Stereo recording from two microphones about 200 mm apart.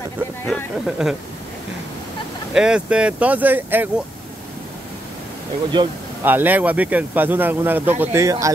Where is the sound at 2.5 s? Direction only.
5° right (ahead or behind).